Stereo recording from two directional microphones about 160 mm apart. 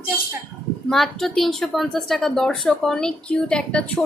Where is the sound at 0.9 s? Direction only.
Centre (ahead or behind).